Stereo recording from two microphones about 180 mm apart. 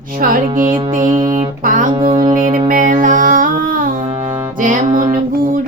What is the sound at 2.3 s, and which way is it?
Music, 45° right (ahead or behind).